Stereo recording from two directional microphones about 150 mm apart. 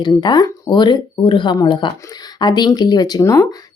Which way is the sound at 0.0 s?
30° left (ahead or behind).